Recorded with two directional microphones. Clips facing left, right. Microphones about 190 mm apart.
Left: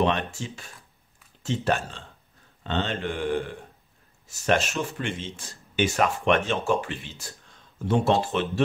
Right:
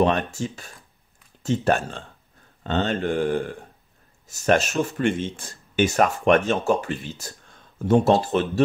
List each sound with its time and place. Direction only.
0.0 s speech: 45° right (ahead or behind)